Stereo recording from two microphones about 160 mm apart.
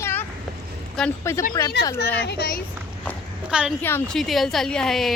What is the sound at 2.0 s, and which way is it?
Speech, 90° left.